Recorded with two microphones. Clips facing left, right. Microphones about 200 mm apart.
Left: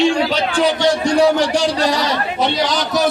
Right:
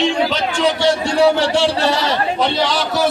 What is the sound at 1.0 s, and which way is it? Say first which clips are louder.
Speech: left 1 dB; 15° left (ahead or behind).